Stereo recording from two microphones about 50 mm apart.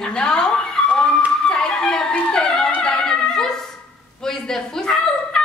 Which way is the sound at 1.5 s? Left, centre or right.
Centre.